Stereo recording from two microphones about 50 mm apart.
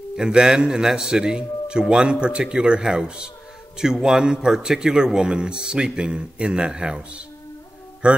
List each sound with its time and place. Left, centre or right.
0.2 s a man's voice: centre